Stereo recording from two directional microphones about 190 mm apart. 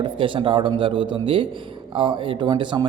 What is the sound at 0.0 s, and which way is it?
Speech, 25° right (ahead or behind).